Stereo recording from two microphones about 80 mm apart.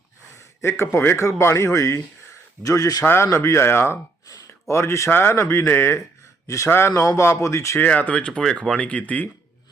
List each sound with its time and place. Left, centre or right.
0.6 s a man's voice: left
3.0 s a man's voice: left
7.8 s speech: centre